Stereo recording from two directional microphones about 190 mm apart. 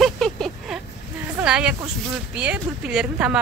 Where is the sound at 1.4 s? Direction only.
5° right (ahead or behind).